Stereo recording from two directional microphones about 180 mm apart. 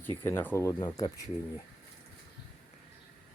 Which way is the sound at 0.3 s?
15° left (ahead or behind).